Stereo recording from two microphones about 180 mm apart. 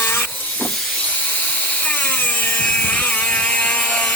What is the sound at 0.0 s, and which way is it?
Vehicle, 10° left (ahead or behind).